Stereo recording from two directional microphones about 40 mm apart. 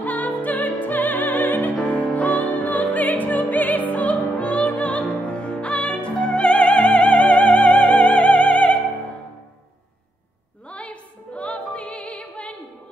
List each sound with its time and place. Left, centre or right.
0.0 s music: left
10.7 s music: left